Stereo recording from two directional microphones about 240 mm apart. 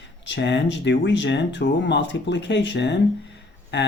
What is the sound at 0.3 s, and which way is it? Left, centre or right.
Speech, left.